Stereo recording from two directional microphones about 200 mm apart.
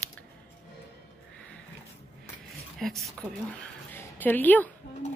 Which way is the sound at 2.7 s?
Centre (ahead or behind).